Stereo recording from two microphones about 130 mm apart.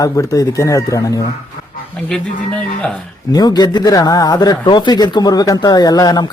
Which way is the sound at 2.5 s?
5° left (ahead or behind).